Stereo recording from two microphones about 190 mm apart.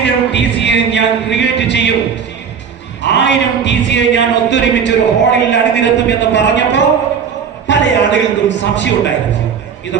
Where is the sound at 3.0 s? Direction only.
70° left (ahead or behind).